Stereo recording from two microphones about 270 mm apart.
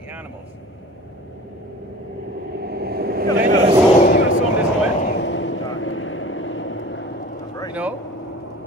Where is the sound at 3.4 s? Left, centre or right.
Right.